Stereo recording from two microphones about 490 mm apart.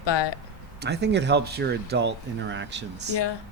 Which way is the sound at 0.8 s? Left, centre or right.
Centre.